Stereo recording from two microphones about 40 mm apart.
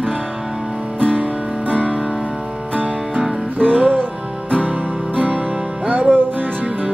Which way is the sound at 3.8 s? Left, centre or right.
Right.